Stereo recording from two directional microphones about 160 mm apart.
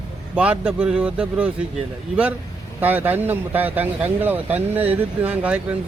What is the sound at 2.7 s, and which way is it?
Speech, 10° right (ahead or behind).